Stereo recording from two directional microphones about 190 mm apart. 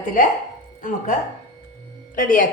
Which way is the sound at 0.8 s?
45° left (ahead or behind).